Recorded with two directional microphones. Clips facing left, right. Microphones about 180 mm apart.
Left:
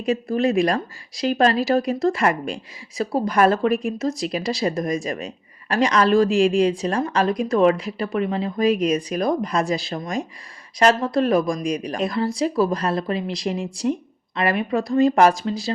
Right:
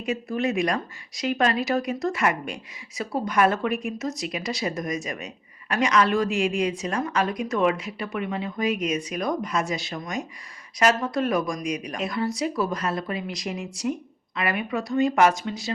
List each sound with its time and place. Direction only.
0.0 s speech: 35° left (ahead or behind)